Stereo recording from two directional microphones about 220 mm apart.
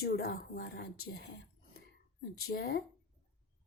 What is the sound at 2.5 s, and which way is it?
Speech, 45° left (ahead or behind).